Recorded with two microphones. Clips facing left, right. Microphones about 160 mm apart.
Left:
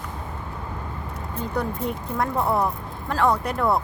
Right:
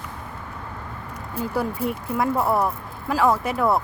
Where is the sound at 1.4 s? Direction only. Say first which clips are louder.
Right 2 dB; 10° right (ahead or behind).